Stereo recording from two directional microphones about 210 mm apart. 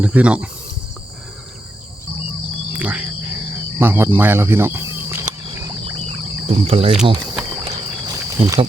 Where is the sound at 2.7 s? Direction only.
5° right (ahead or behind).